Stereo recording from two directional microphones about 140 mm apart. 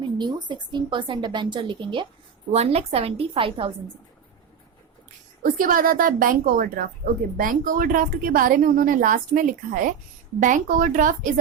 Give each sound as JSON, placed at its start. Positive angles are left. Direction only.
{"t": 0.0, "sound": "speech", "side_deg": -35}
{"t": 2.5, "sound": "a woman's voice", "side_deg": -50}
{"t": 5.4, "sound": "a woman's voice", "side_deg": -85}